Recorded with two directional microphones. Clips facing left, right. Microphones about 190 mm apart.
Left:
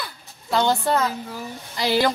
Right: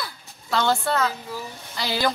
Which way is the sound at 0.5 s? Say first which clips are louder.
Left 2 dB; 15° left (ahead or behind).